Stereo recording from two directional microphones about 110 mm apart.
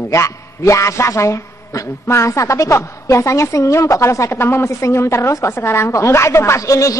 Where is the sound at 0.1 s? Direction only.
25° left (ahead or behind).